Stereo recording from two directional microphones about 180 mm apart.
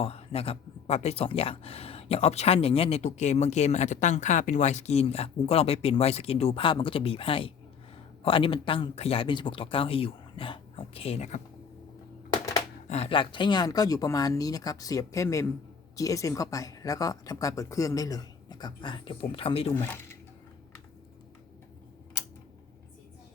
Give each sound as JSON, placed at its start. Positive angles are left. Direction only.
{"t": 0.0, "sound": "speech", "side_deg": 35}
{"t": 12.3, "sound": "a sound", "side_deg": 20}
{"t": 12.9, "sound": "speech", "side_deg": 35}